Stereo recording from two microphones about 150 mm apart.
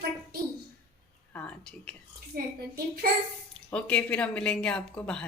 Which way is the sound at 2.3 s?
85° right.